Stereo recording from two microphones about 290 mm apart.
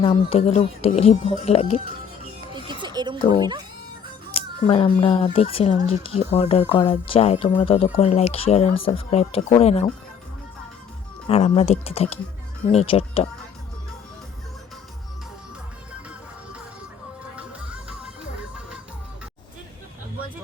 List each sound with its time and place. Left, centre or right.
0.0 s speech: left
2.5 s music: centre
4.4 s speech: centre
11.3 s speech: left
17.3 s music: centre